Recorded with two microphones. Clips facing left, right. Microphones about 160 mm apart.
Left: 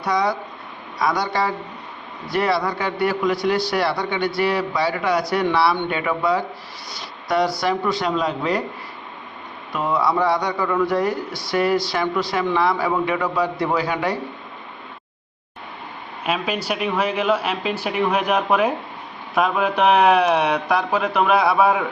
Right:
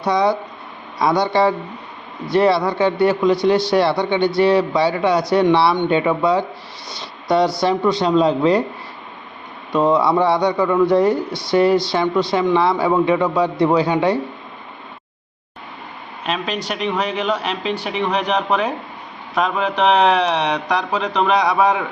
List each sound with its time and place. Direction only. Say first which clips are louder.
0.0 s a man's voice: right 4 dB; 25° right (ahead or behind)
7.0 s a sound: right 4 dB; 25° right (ahead or behind)
7.6 s a man's voice: right 4 dB; 25° right (ahead or behind)
9.9 s a man's voice: right 1 dB; 25° right (ahead or behind)
16.2 s speech: even; 5° left (ahead or behind)